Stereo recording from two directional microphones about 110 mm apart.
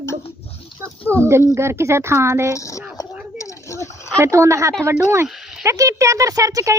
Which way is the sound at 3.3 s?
30° left (ahead or behind).